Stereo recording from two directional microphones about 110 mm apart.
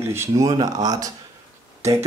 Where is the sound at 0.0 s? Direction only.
25° right (ahead or behind).